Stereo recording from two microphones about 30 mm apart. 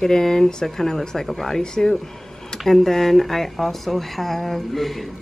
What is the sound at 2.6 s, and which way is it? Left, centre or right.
A woman's voice, centre.